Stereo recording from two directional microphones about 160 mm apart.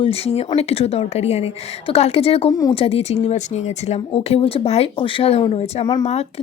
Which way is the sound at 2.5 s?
20° left (ahead or behind).